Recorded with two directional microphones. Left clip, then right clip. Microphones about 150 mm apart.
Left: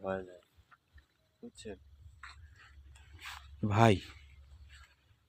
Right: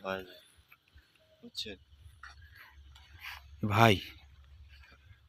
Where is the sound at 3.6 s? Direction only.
20° left (ahead or behind).